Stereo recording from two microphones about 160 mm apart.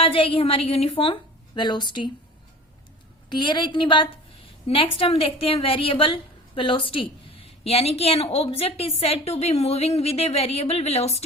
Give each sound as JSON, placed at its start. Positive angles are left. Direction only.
{"t": 0.0, "sound": "a woman's voice", "side_deg": 35}
{"t": 3.2, "sound": "a woman's voice", "side_deg": 30}